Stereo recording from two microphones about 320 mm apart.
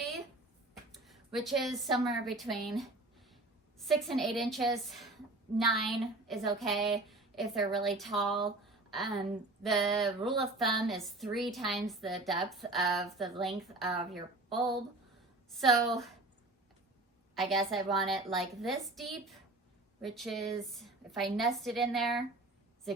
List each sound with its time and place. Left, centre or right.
0.9 s a woman's voice: centre
8.6 s a sound: centre
9.6 s a woman's voice: centre
17.5 s a woman's voice: centre